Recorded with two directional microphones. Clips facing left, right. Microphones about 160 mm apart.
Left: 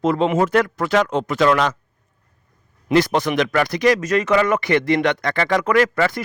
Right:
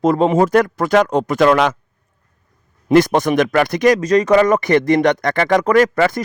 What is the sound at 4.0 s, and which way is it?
Speech, 35° right (ahead or behind).